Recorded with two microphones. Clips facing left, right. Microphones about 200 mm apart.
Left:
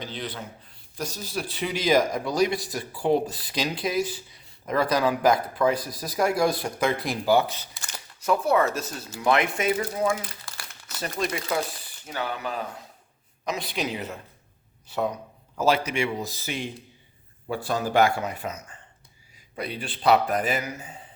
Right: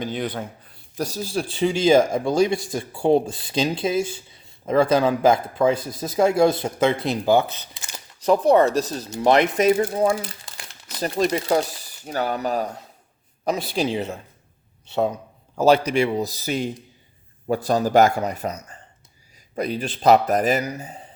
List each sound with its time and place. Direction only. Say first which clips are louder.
0.0 s speech: right 8 dB; 50° right (ahead or behind)
0.9 s speech: right 6 dB; 35° right (ahead or behind)
8.2 s speech: right 6 dB; 35° right (ahead or behind)
10.4 s crumpling: right 1 dB; 20° right (ahead or behind)
11.0 s speech: right 7 dB; 35° right (ahead or behind)
13.7 s speech: right 6 dB; 30° right (ahead or behind)